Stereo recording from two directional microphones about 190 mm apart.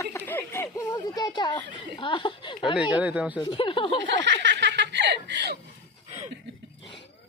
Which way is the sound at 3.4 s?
25° left (ahead or behind).